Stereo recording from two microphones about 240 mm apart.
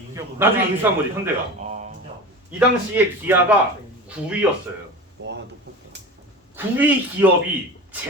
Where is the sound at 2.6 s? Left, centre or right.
Centre.